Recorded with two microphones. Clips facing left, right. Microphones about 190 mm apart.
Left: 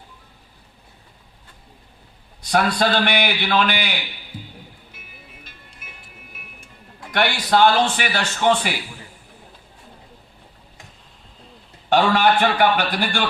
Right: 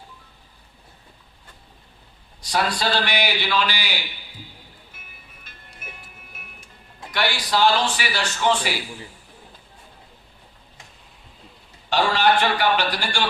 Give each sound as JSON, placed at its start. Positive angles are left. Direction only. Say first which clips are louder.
{"t": 2.5, "sound": "a man's voice", "louder": "left 4 dB", "side_deg": 60}
{"t": 5.4, "sound": "music", "louder": "even", "side_deg": -50}
{"t": 7.1, "sound": "a man's voice", "louder": "left 4 dB", "side_deg": 55}
{"t": 11.9, "sound": "a man's voice", "louder": "left 3 dB", "side_deg": 55}